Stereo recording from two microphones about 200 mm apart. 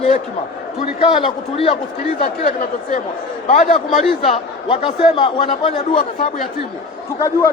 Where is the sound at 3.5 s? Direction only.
35° left (ahead or behind).